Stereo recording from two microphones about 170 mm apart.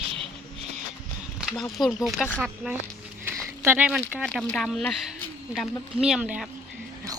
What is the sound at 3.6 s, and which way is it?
Speech, 10° right (ahead or behind).